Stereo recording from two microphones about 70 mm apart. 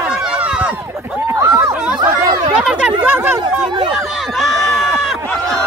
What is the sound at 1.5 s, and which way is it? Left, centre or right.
Chatter, centre.